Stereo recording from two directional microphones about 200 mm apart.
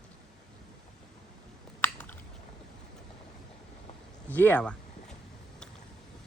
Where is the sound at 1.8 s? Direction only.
10° left (ahead or behind).